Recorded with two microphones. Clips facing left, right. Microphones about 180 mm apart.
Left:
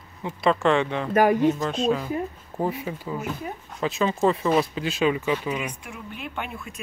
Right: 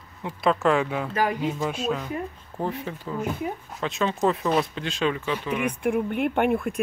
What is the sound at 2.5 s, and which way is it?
Speech, 10° left (ahead or behind).